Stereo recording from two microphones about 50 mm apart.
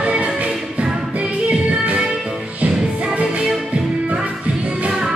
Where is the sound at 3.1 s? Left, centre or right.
Right.